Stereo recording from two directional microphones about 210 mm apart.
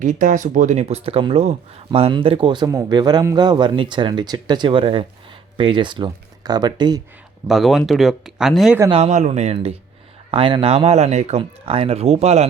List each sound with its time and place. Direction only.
0.0 s speech: 40° right (ahead or behind); by 7.0 s 20° right (ahead or behind)
7.4 s speech: centre (ahead or behind)
8.9 s speech: 30° right (ahead or behind)